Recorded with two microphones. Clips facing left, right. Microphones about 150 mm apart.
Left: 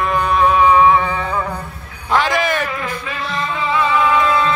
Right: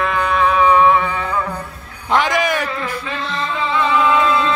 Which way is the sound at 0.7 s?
30° left (ahead or behind).